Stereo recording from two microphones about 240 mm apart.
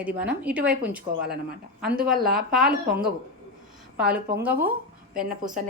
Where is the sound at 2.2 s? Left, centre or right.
Right.